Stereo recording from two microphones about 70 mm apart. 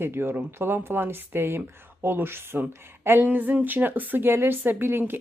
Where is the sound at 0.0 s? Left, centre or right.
Right.